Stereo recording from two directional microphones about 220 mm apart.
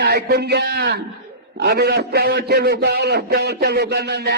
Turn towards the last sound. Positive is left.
turn(degrees=-45)  # may be behind; listen again after turning